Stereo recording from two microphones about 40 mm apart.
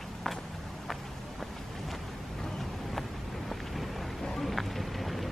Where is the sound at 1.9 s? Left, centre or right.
Centre.